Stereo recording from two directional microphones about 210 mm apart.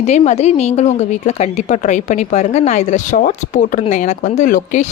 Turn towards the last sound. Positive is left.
turn(degrees=40)  # may be behind; listen again after turning